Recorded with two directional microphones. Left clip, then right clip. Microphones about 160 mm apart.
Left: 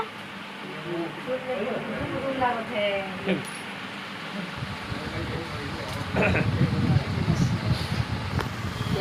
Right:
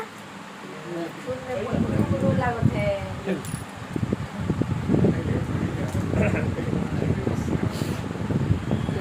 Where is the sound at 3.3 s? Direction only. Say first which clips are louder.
Left 1 dB; centre (ahead or behind).